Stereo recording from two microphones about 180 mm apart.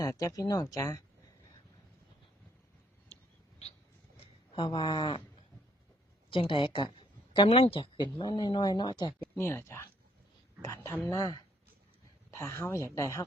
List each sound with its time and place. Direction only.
0.0 s speech: 20° left (ahead or behind)
4.5 s speech: 25° left (ahead or behind)
6.3 s speech: 30° left (ahead or behind)
9.3 s speech: 10° left (ahead or behind)